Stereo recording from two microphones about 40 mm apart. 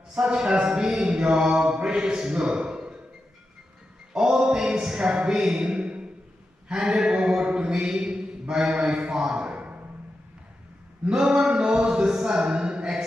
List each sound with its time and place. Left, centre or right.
0.1 s speech: right
4.1 s speech: centre
6.8 s a sound: right
11.1 s speech: centre